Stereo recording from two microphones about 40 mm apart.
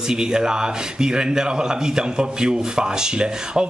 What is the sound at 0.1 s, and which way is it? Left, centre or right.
A man's voice, centre.